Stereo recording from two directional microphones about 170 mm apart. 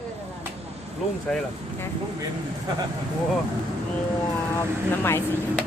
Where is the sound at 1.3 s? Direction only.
5° left (ahead or behind).